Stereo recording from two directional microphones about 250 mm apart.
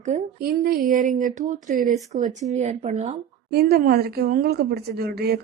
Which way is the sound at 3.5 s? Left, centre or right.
Right.